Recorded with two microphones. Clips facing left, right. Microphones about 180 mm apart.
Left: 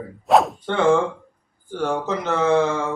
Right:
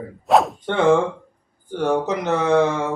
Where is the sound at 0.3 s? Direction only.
Centre (ahead or behind).